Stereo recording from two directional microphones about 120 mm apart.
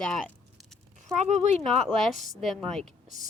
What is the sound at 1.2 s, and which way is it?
Speech, 70° right (ahead or behind).